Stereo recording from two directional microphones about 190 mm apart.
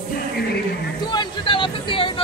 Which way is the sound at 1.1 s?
25° left (ahead or behind).